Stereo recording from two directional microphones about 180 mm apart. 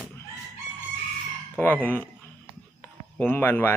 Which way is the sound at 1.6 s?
10° left (ahead or behind).